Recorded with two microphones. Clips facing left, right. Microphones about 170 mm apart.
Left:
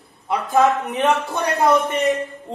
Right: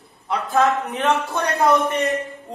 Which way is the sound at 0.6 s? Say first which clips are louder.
Left 2 dB; centre (ahead or behind).